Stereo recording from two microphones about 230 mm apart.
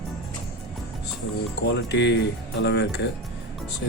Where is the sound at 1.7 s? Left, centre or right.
Left.